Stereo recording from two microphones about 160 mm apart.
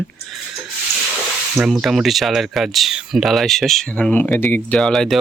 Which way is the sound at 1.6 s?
5° right (ahead or behind).